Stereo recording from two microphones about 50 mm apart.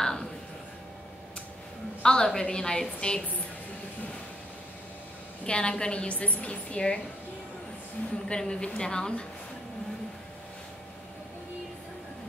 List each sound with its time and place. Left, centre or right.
0.0 s a sound: centre
2.0 s a woman's voice: centre
5.4 s a woman's voice: centre
8.3 s a woman's voice: centre